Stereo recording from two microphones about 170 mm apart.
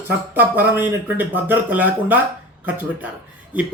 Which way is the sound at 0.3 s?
10° right (ahead or behind).